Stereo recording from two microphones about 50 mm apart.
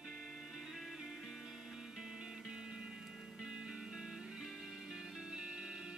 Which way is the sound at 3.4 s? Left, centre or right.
Centre.